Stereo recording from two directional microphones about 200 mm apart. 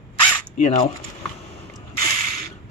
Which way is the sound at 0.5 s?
35° left (ahead or behind).